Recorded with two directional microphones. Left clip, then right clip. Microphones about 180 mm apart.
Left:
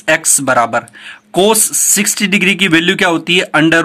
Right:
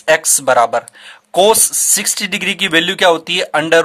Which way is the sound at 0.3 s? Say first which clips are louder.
Even; 35° right (ahead or behind).